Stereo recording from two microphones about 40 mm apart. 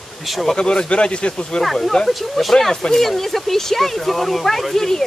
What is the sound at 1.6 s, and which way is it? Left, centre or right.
Speech, centre.